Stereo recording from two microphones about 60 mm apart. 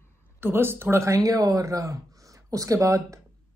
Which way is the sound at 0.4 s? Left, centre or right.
Right.